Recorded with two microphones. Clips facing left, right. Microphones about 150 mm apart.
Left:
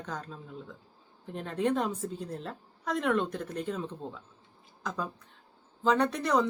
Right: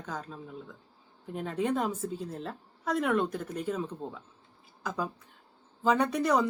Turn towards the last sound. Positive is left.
turn(degrees=-10)  # may be behind; listen again after turning